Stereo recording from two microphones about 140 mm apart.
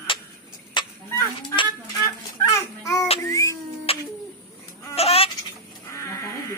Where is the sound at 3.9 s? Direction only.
45° left (ahead or behind).